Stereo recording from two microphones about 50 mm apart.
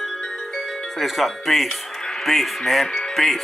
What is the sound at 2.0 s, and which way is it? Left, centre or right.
Music, centre.